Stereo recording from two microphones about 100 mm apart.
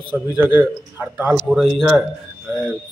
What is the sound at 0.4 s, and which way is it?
Speech, 20° right (ahead or behind).